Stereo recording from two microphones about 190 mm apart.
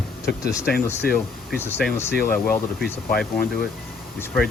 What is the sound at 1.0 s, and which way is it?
Speech, 55° left (ahead or behind).